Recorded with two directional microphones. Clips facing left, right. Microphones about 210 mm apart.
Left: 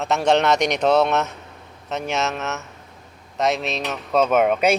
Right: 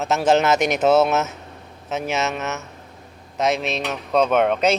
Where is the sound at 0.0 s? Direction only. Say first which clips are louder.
Right 1 dB; centre (ahead or behind).